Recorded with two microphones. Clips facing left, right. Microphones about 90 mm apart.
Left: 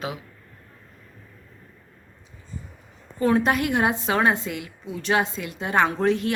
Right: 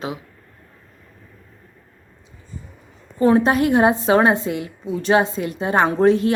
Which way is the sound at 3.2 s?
30° right (ahead or behind).